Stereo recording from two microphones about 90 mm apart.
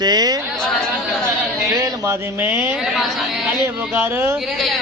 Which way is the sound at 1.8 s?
35° right (ahead or behind).